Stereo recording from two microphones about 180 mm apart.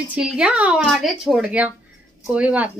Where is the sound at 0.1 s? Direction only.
5° right (ahead or behind).